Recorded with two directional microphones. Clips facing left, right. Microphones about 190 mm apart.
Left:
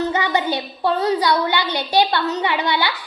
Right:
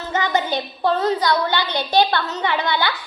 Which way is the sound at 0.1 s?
15° left (ahead or behind).